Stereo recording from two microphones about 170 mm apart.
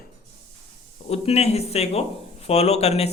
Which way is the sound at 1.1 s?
40° left (ahead or behind).